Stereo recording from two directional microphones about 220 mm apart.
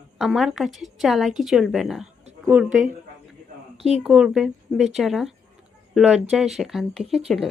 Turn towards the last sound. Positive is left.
turn(degrees=0)  # may be behind; listen again after turning